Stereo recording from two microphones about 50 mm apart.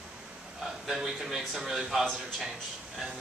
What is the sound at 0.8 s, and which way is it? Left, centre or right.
A man's voice, centre.